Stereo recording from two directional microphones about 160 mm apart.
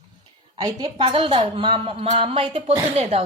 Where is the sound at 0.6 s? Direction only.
30° right (ahead or behind).